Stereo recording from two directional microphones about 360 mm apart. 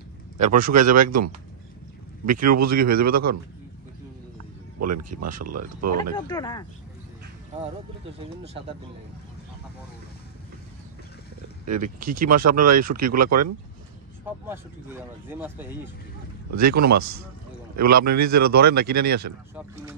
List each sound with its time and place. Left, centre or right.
0.4 s speech: right
4.7 s speech: right
6.1 s speech: centre
11.6 s speech: right
15.2 s speech: centre
16.4 s speech: right
18.5 s speech: right
19.0 s speech: right